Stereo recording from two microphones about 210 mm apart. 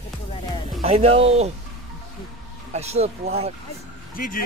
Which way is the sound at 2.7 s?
30° right (ahead or behind).